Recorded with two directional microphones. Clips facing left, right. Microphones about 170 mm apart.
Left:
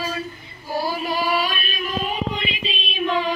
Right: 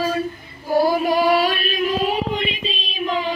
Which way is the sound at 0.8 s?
55° right (ahead or behind).